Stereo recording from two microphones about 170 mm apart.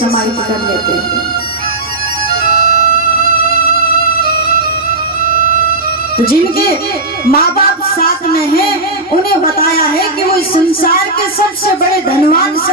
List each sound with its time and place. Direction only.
2.5 s music: 65° left (ahead or behind)
4.2 s music: 65° left (ahead or behind)
6.1 s a woman's voice: 60° left (ahead or behind)
9.4 s a woman's voice: 60° left (ahead or behind)